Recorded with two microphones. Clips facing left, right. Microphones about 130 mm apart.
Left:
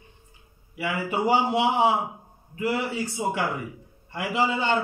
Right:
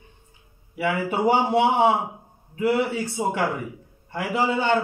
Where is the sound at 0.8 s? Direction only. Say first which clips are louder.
Right 3 dB; 50° right (ahead or behind).